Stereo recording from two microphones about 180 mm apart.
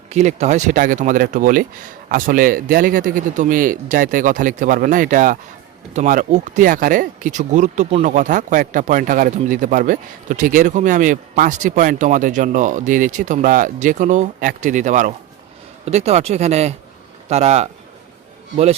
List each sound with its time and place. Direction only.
0.1 s a man's voice: 40° right (ahead or behind)